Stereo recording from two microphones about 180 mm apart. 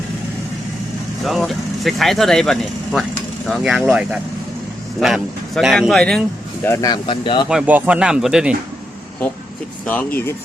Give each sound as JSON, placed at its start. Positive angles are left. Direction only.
{"t": 1.2, "sound": "speech", "side_deg": 0}
{"t": 6.7, "sound": "speech", "side_deg": 20}
{"t": 7.4, "sound": "speech", "side_deg": -5}
{"t": 9.8, "sound": "speech", "side_deg": 10}